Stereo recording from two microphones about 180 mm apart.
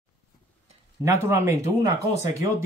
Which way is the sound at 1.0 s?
15° right (ahead or behind).